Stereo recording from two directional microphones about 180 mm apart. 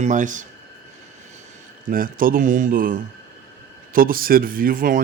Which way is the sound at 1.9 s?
50° right (ahead or behind).